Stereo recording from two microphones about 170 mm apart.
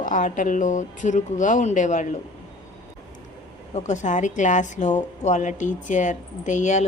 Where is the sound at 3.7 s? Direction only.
45° left (ahead or behind).